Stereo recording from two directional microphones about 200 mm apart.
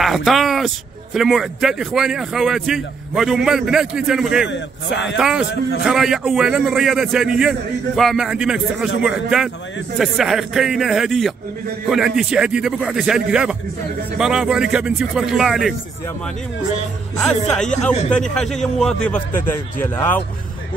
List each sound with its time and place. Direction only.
0.0 s speech: centre (ahead or behind)
4.5 s a man's voice: 65° left (ahead or behind)
5.1 s speech: 5° right (ahead or behind)
17.2 s speech: 5° left (ahead or behind)